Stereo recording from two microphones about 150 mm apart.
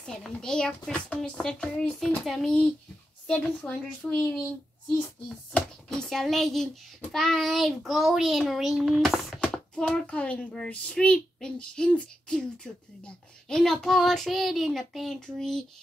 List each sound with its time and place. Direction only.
0.0 s a child's voice: 5° left (ahead or behind)
5.5 s a child's voice: 5° left (ahead or behind)